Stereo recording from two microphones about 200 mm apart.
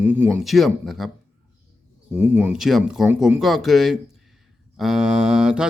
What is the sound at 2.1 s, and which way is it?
Speech, 10° right (ahead or behind).